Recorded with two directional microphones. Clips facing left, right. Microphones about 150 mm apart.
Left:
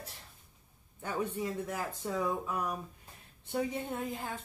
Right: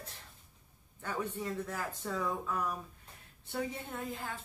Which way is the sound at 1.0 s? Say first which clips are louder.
Left 3 dB; 15° left (ahead or behind).